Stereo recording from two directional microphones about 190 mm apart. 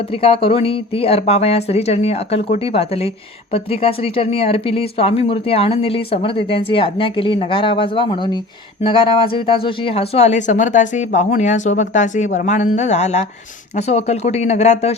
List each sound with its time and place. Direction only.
0.1 s speech: 30° left (ahead or behind)